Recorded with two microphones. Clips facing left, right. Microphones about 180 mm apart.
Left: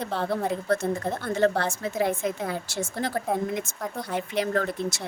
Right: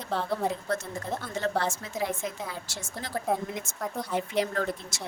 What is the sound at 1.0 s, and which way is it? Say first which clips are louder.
A woman's voice: left 6 dB; 60° left (ahead or behind).